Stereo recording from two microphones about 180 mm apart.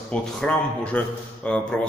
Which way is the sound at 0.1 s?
5° left (ahead or behind).